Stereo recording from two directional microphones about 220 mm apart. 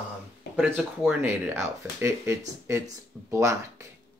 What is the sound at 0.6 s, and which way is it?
Speech, 5° right (ahead or behind).